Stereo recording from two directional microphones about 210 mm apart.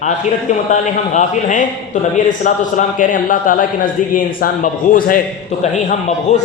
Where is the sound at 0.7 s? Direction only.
35° left (ahead or behind).